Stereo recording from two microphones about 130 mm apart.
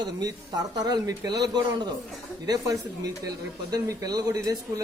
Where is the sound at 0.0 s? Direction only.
30° right (ahead or behind).